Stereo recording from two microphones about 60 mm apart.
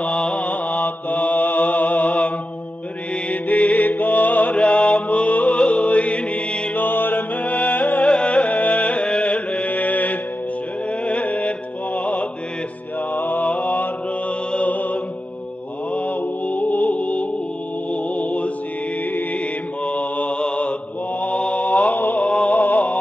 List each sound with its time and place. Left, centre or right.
0.0 s mantra: centre
3.3 s music: left
6.8 s music: left
13.1 s mantra: left